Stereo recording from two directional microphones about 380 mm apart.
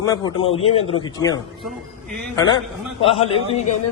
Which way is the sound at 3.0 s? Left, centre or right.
Centre.